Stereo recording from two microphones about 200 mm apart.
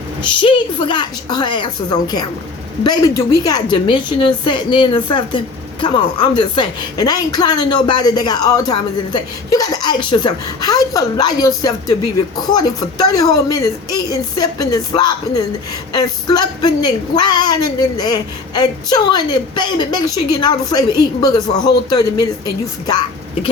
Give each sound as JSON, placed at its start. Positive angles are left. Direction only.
{"t": 0.2, "sound": "a woman's voice", "side_deg": 25}